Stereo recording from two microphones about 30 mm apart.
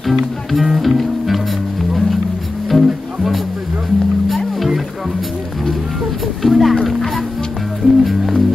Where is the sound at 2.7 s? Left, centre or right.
Right.